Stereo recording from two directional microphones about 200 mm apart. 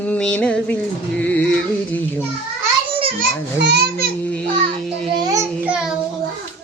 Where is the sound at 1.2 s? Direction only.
5° left (ahead or behind).